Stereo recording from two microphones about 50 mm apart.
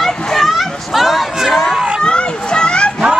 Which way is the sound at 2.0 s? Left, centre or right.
Centre.